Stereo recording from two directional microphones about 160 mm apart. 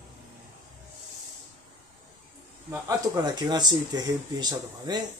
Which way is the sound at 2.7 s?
25° right (ahead or behind).